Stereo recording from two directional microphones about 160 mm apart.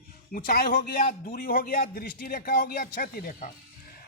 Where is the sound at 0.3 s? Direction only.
65° left (ahead or behind).